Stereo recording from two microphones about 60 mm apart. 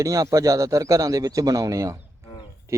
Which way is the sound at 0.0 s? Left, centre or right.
Right.